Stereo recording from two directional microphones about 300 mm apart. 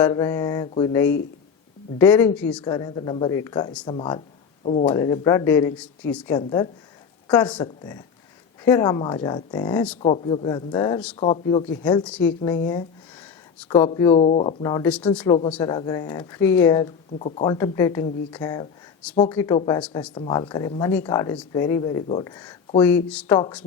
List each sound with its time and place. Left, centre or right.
0.0 s speech: centre